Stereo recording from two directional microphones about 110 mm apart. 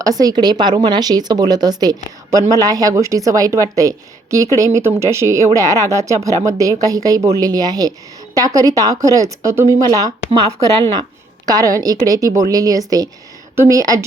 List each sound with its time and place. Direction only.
0.0 s speech: 35° right (ahead or behind)
11.4 s speech: 35° right (ahead or behind)